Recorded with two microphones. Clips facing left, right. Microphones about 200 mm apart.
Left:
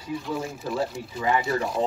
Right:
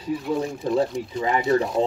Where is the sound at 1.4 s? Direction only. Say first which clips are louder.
Right 6 dB; centre (ahead or behind).